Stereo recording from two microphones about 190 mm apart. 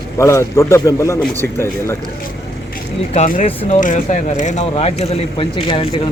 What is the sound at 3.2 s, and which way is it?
Speech, 45° left (ahead or behind).